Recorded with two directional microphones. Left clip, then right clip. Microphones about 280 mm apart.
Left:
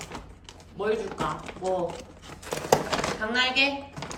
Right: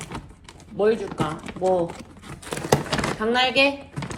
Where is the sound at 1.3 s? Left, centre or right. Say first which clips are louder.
Right 6 dB; right.